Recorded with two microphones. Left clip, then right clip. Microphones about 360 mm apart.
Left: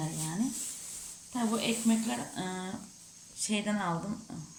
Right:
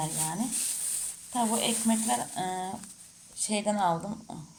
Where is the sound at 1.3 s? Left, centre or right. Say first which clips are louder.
Right 4 dB; centre.